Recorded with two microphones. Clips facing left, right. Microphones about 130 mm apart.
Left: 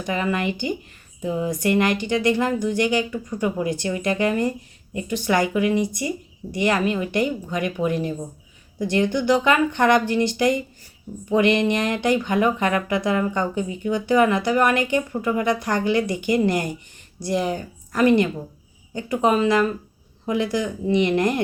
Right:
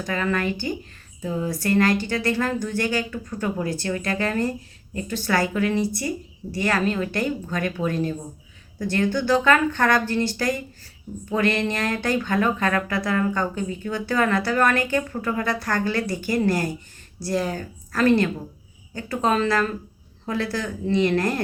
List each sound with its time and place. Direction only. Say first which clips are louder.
0.0 s speech: left 1 dB; 15° left (ahead or behind)